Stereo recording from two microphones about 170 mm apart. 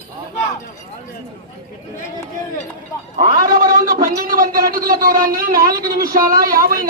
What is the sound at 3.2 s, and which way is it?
A man's voice, 55° right (ahead or behind).